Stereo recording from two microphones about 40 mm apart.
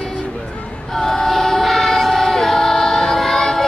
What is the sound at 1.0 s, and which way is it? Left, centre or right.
Choir, centre.